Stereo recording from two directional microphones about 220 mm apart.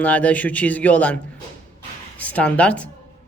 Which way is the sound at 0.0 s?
5° left (ahead or behind).